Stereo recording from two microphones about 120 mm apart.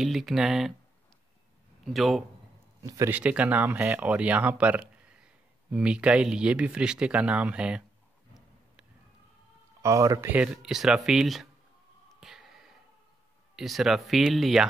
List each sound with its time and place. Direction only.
0.0 s speech: centre (ahead or behind)
2.0 s speech: centre (ahead or behind)
2.8 s speech: 30° right (ahead or behind)
3.1 s speech: 10° right (ahead or behind)
9.8 s speech: 25° right (ahead or behind)
10.3 s speech: 5° right (ahead or behind)
12.2 s a sound: 5° right (ahead or behind)
13.6 s speech: centre (ahead or behind)